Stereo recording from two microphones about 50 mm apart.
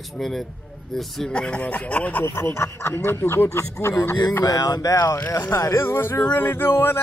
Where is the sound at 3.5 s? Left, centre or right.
Left.